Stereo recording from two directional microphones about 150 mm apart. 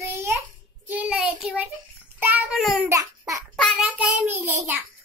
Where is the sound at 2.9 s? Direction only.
20° right (ahead or behind).